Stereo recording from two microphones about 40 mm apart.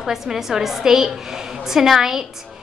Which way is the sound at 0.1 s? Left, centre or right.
Centre.